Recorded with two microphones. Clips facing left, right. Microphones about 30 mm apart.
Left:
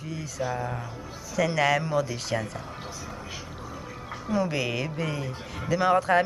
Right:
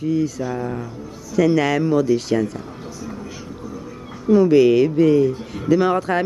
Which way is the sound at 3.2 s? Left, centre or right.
Left.